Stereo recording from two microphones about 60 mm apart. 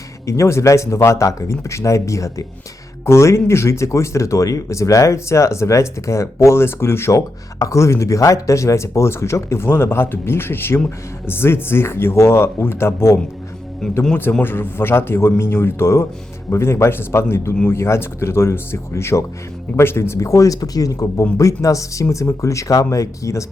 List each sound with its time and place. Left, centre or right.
0.3 s speech: left
7.6 s speech: left
13.8 s speech: centre
14.4 s a man's voice: left
21.3 s speech: left